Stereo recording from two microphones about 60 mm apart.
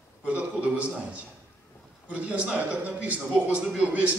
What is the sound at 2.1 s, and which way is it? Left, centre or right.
A man's voice, right.